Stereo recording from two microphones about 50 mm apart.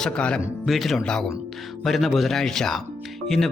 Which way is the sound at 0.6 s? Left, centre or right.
Centre.